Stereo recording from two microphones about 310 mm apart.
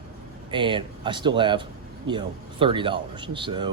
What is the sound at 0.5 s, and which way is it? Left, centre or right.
Speech, centre.